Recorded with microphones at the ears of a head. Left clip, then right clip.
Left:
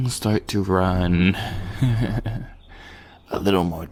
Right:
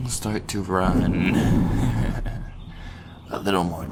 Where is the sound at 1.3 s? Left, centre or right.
Right.